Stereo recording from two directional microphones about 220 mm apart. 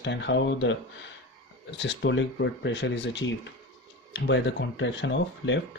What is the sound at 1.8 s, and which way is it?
Speech, 55° left (ahead or behind).